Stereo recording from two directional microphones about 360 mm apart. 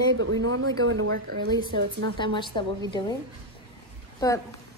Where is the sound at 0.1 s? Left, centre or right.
Right.